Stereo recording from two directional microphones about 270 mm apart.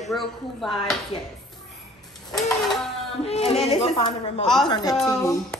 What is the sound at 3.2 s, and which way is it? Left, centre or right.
A woman's voice, left.